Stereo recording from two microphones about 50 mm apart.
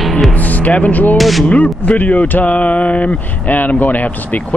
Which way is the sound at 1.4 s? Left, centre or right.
Left.